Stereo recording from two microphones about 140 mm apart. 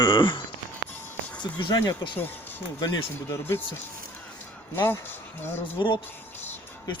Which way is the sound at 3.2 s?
15° left (ahead or behind).